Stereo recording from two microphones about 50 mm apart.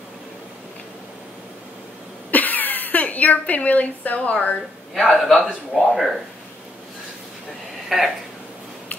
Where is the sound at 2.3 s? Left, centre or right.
Left.